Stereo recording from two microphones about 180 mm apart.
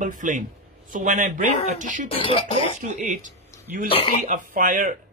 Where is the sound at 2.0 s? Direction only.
30° left (ahead or behind).